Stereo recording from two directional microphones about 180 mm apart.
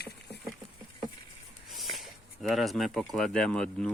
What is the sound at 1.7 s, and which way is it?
Speech, centre (ahead or behind).